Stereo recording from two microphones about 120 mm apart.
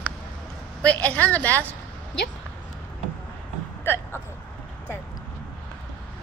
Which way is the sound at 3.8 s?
20° left (ahead or behind).